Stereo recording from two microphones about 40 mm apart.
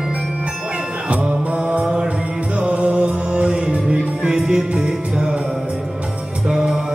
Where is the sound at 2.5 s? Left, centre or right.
Right.